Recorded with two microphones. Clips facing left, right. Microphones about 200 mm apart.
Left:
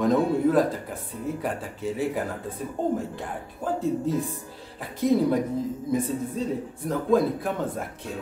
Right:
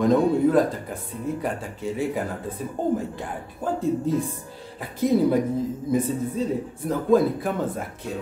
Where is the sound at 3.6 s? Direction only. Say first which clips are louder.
Right 2 dB; centre (ahead or behind).